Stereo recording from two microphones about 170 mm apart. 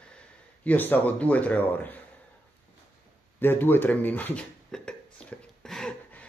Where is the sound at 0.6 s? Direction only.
10° left (ahead or behind).